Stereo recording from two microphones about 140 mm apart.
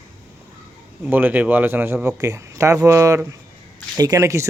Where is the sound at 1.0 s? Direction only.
10° right (ahead or behind).